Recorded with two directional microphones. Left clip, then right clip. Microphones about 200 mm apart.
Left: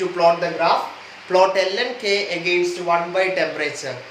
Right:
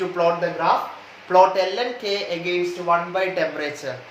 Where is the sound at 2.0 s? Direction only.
15° right (ahead or behind).